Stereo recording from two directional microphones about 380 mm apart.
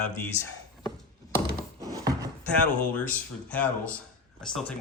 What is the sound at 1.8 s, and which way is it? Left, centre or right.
Wood, centre.